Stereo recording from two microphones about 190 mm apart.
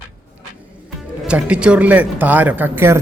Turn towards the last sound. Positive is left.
turn(degrees=-10)  # may be behind; listen again after turning